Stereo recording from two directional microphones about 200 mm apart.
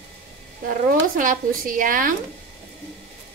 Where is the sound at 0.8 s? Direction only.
45° right (ahead or behind).